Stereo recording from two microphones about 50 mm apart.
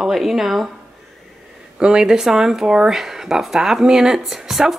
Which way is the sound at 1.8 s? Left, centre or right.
Centre.